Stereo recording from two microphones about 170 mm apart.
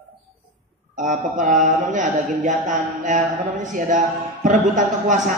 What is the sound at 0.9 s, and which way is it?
Mantra, 45° right (ahead or behind).